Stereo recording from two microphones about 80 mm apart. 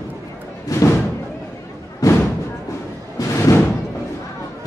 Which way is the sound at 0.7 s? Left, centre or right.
Left.